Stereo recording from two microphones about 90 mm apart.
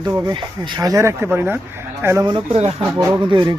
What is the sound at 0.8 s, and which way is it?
Speech, 40° right (ahead or behind).